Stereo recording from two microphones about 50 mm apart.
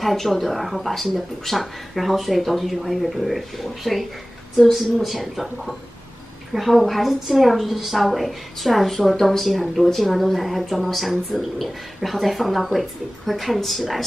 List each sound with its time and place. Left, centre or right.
0.0 s a woman's voice: centre